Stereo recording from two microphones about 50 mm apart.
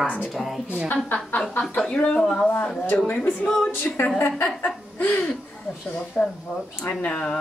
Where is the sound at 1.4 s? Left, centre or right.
Centre.